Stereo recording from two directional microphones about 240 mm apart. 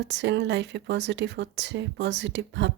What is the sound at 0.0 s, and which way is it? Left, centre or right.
Speech, right.